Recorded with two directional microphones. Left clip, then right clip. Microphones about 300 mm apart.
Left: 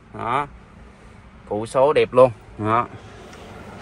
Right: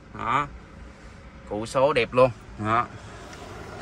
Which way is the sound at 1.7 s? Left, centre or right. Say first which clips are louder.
Left 5 dB; centre.